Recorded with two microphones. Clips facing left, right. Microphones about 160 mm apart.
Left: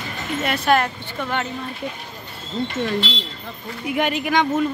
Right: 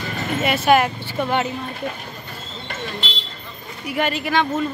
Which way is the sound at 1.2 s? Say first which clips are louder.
Right 4 dB; 15° right (ahead or behind).